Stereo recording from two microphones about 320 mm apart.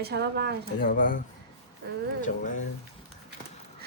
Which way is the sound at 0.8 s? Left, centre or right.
Left.